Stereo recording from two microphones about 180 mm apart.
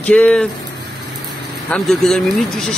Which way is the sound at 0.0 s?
5° left (ahead or behind).